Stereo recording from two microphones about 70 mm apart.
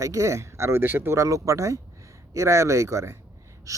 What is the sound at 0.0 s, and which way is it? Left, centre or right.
Speech, right.